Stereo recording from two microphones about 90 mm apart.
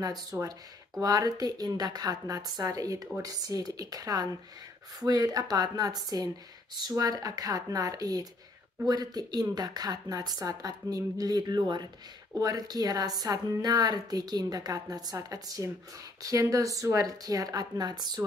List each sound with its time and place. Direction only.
0.0 s a woman's voice: 40° right (ahead or behind)